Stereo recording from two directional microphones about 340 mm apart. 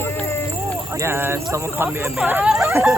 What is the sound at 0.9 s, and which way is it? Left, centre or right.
Speech, centre.